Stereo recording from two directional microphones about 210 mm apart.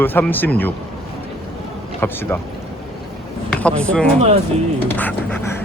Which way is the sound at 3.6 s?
5° left (ahead or behind).